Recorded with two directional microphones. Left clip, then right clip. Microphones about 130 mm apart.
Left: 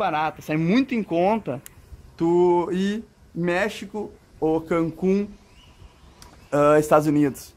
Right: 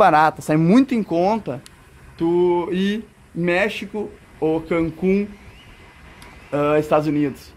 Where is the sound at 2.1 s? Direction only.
30° left (ahead or behind).